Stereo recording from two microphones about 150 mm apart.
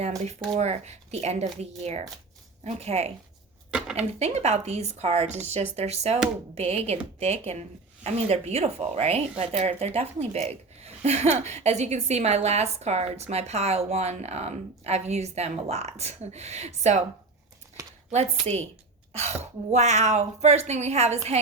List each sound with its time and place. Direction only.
0.3 s speech: 45° right (ahead or behind)
3.7 s dishes: 5° right (ahead or behind)
4.2 s speech: 45° right (ahead or behind)
17.8 s a sound: 20° right (ahead or behind)
19.1 s speech: 45° right (ahead or behind)